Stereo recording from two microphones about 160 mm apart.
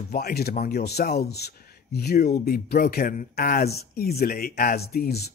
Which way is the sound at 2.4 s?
70° left (ahead or behind).